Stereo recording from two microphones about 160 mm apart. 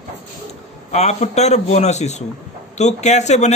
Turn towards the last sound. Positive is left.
turn(degrees=45)  # may be behind; listen again after turning